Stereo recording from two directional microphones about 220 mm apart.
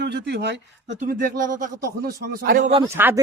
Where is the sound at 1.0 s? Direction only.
35° right (ahead or behind).